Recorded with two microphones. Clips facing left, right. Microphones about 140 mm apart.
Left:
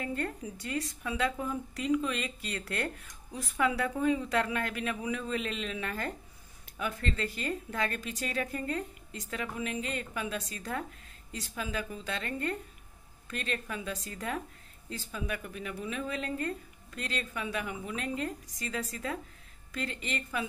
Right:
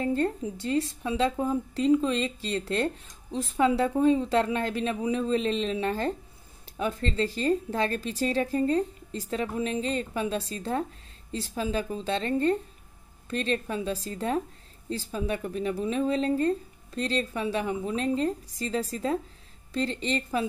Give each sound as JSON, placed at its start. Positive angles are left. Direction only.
{"t": 0.0, "sound": "a woman's voice", "side_deg": -30}